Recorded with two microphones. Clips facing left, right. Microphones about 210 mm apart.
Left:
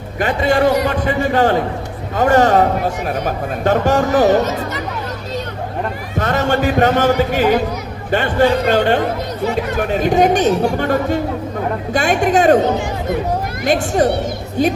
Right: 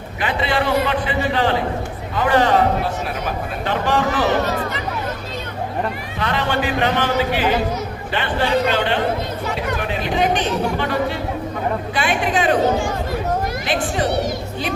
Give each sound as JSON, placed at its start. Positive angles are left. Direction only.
{"t": 0.2, "sound": "speech", "side_deg": 45}
{"t": 6.1, "sound": "speech", "side_deg": 45}
{"t": 12.6, "sound": "speech", "side_deg": 20}
{"t": 13.7, "sound": "speech", "side_deg": 45}